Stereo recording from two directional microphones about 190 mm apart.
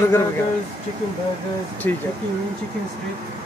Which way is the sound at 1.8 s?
10° left (ahead or behind).